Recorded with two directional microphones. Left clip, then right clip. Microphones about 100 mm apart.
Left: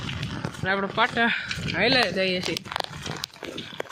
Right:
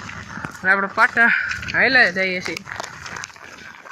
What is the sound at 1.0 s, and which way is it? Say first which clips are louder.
Speech: right 7 dB; 40° left (ahead or behind).